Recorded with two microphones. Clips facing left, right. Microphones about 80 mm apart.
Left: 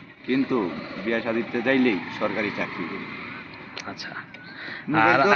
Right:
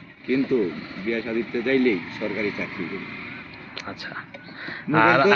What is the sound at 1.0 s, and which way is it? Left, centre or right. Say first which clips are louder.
Speech: even; left.